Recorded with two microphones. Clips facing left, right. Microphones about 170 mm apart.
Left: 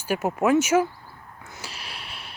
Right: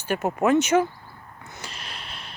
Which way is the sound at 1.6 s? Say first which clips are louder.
Even; 5° left (ahead or behind).